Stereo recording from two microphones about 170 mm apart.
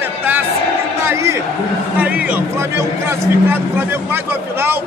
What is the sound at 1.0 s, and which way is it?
A man's voice, 15° right (ahead or behind).